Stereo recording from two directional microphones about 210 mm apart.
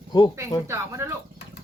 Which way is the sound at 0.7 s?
15° right (ahead or behind).